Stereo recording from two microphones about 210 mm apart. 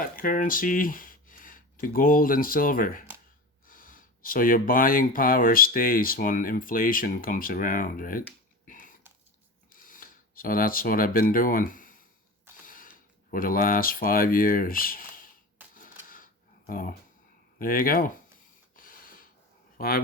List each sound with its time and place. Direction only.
0.0 s speech: 40° left (ahead or behind)
8.6 s typing: 40° left (ahead or behind)
9.7 s camera: 40° left (ahead or behind)
12.6 s mechanisms: 40° left (ahead or behind)
13.3 s speech: 40° left (ahead or behind)
15.6 s a sound: 10° right (ahead or behind)
16.0 s a sound: 40° left (ahead or behind)
17.6 s speech: 45° left (ahead or behind)
18.8 s a sound: 40° left (ahead or behind)
19.7 s speech: 45° left (ahead or behind)